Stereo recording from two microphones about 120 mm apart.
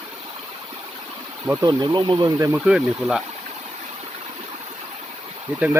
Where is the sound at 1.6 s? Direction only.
35° right (ahead or behind).